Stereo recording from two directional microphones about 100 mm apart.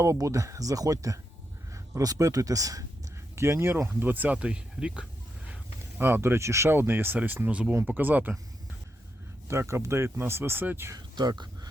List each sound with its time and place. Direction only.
0.0 s speech: 30° right (ahead or behind); by 5.0 s 10° right (ahead or behind)
6.0 s speech: 20° right (ahead or behind)
9.5 s speech: 25° right (ahead or behind)
10.9 s a sound: 45° right (ahead or behind)